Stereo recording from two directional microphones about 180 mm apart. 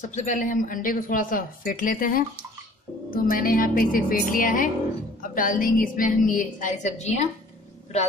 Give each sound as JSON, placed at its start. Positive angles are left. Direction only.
{"t": 0.0, "sound": "speech", "side_deg": 40}